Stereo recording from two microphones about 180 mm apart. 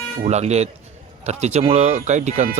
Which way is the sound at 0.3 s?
40° right (ahead or behind).